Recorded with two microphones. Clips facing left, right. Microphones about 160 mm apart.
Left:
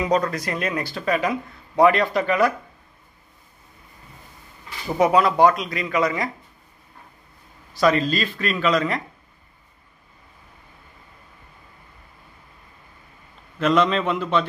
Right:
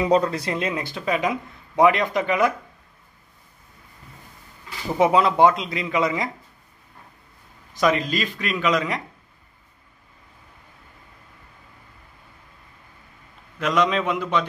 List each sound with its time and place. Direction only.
0.1 s speech: 30° right (ahead or behind)
4.9 s speech: 20° right (ahead or behind)
7.7 s speech: 15° right (ahead or behind)
13.6 s speech: 10° right (ahead or behind)